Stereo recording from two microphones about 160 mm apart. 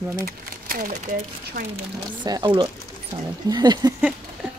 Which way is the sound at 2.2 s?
30° right (ahead or behind).